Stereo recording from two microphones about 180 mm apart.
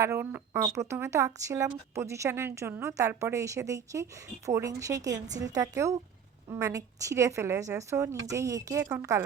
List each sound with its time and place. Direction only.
0.0 s a woman's voice: 15° right (ahead or behind)